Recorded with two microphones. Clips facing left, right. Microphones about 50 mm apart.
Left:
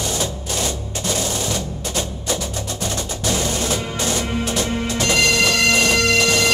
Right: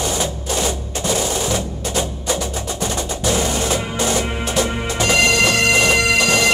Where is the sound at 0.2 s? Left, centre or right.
Centre.